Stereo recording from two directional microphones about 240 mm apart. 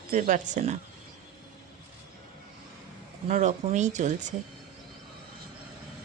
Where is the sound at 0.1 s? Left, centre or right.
Right.